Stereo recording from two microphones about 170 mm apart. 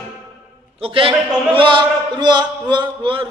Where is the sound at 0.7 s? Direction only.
30° right (ahead or behind).